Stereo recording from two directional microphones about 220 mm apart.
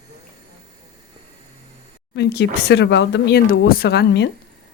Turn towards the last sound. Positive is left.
turn(degrees=50)  # may be behind; listen again after turning